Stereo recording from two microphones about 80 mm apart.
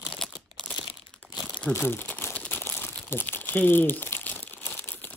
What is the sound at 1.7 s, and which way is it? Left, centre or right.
Crumpling, left.